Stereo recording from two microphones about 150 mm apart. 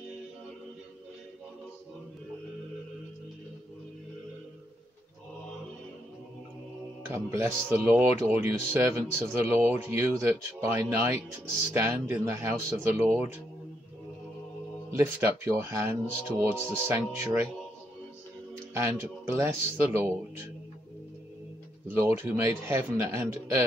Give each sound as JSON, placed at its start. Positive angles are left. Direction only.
{"t": 7.1, "sound": "speech", "side_deg": -15}
{"t": 14.9, "sound": "speech", "side_deg": -15}
{"t": 18.7, "sound": "speech", "side_deg": -15}
{"t": 21.9, "sound": "speech", "side_deg": -15}